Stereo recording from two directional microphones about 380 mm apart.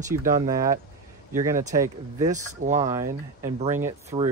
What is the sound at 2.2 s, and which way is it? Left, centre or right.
Speech, centre.